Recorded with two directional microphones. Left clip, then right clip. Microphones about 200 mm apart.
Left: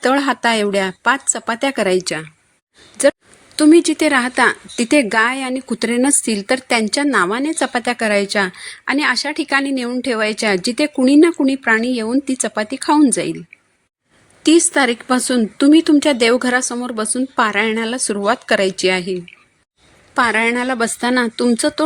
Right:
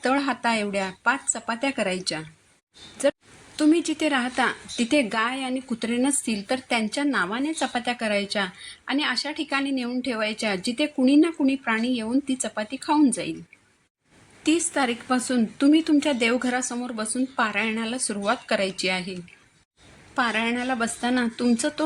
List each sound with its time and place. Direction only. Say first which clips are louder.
0.0 s speech: left 8 dB; 45° left (ahead or behind)
14.4 s speech: left 10 dB; 50° left (ahead or behind)
20.1 s speech: left 9 dB; 45° left (ahead or behind)